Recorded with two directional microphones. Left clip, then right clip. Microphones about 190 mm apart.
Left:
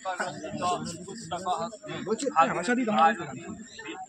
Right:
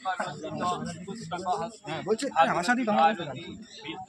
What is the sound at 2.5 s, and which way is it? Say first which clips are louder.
Speech: right 2 dB; 50° right (ahead or behind).